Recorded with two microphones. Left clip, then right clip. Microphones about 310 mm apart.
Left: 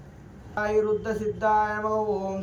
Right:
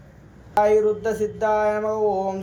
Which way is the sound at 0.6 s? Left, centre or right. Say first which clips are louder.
Right 7 dB; centre.